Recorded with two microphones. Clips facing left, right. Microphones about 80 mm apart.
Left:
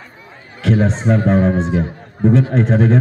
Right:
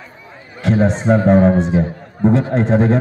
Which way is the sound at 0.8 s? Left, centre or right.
Right.